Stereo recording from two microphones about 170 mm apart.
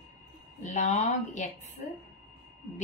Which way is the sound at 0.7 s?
45° left (ahead or behind).